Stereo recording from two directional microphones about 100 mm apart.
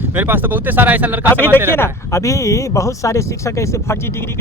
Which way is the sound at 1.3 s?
20° left (ahead or behind).